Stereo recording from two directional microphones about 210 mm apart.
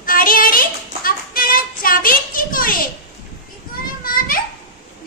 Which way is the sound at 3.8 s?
45° left (ahead or behind).